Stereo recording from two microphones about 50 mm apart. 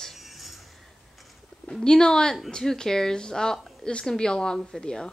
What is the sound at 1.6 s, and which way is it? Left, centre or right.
A woman's voice, centre.